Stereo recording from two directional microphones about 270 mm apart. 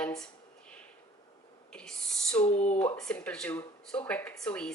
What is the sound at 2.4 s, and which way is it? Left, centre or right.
Speech, left.